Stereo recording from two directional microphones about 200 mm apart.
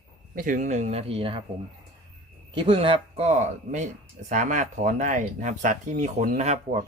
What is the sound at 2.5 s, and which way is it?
Speech, 25° right (ahead or behind).